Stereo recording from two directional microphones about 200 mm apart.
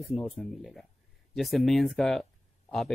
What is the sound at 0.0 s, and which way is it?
Speech, centre (ahead or behind).